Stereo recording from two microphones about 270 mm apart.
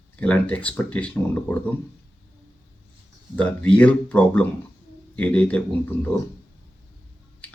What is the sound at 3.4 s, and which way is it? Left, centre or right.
Speech, centre.